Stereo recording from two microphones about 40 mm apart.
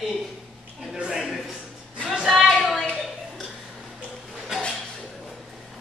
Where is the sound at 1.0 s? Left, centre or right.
Right.